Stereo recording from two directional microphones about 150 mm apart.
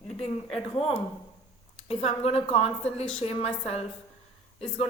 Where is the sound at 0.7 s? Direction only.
40° left (ahead or behind).